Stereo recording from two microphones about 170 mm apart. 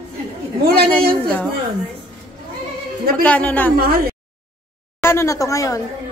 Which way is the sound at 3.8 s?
60° right (ahead or behind).